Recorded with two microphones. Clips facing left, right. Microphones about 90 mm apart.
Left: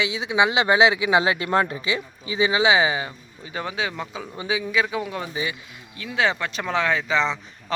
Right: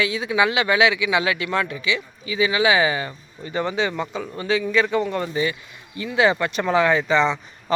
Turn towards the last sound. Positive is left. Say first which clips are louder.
# right 4 dB
turn(degrees=0)  # may be behind; listen again after turning